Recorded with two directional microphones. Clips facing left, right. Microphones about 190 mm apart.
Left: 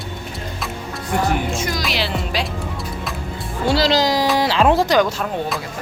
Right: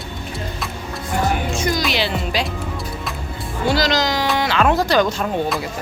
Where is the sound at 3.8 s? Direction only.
30° left (ahead or behind).